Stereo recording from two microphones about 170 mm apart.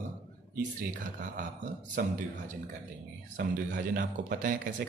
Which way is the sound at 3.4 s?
80° right.